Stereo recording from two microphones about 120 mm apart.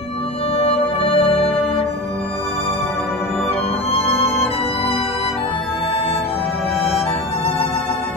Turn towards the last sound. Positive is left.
turn(degrees=55)  # may be behind; listen again after turning